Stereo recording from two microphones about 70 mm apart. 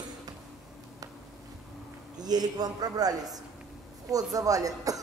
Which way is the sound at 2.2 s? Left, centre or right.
Right.